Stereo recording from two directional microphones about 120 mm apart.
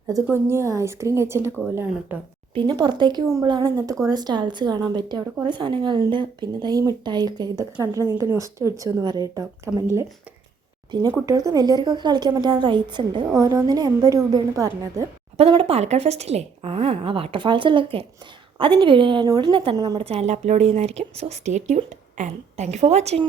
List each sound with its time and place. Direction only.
0.3 s a woman's voice: 20° right (ahead or behind)
2.6 s a woman's voice: 40° right (ahead or behind)
10.9 s speech: 40° right (ahead or behind)
13.3 s a woman's voice: 25° right (ahead or behind)
15.4 s a woman's voice: 50° right (ahead or behind)
19.7 s speech: 30° right (ahead or behind)
20.0 s a woman's voice: 55° right (ahead or behind)